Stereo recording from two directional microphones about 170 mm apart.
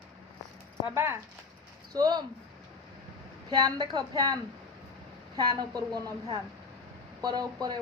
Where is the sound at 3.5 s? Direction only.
25° right (ahead or behind).